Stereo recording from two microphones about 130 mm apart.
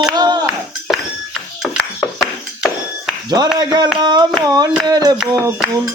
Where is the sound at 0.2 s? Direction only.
30° right (ahead or behind).